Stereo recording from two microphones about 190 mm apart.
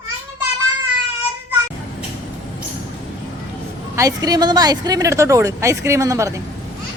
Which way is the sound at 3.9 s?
15° right (ahead or behind).